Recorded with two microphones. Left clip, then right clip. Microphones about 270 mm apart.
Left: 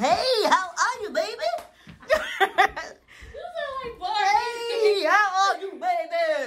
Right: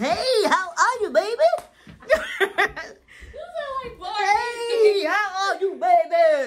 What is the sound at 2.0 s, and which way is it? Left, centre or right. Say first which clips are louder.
Laughter: right 1 dB; centre.